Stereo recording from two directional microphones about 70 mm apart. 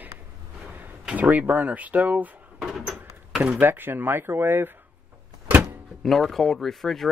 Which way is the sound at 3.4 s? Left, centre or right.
Right.